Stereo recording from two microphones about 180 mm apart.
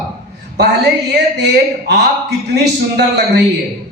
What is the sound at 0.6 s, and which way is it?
A man's voice, 65° right (ahead or behind).